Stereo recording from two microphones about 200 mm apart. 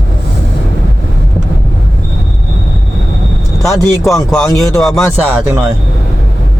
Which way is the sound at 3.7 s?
Centre (ahead or behind).